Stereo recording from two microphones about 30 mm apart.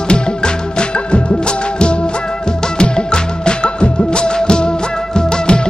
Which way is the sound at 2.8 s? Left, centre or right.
Left.